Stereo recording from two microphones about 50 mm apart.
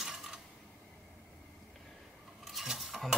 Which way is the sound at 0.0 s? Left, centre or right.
Centre.